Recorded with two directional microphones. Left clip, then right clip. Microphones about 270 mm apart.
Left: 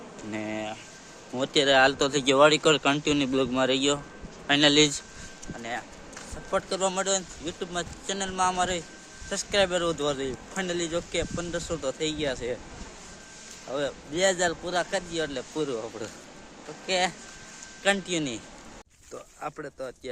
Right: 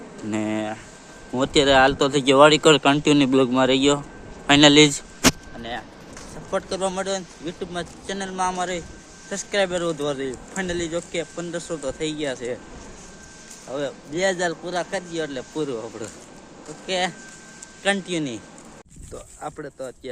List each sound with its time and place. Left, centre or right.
0.3 s speech: centre
6.5 s speech: centre
13.7 s a man's voice: centre
19.4 s a man's voice: centre